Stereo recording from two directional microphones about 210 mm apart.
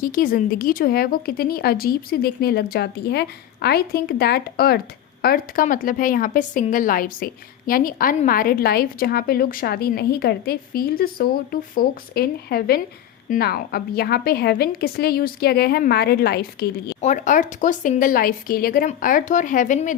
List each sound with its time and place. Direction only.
0.0 s a woman's voice: 40° left (ahead or behind)
17.0 s speech: 35° left (ahead or behind)